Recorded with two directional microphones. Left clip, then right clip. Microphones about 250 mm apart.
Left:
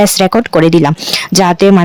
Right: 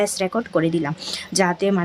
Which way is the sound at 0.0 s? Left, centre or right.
Left.